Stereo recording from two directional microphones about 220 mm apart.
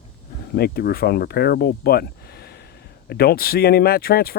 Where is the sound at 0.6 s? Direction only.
45° left (ahead or behind).